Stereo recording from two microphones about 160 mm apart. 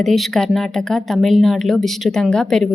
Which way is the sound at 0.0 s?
Centre (ahead or behind).